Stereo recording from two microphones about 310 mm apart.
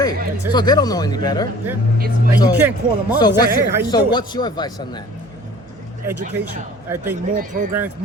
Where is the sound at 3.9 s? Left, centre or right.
Centre.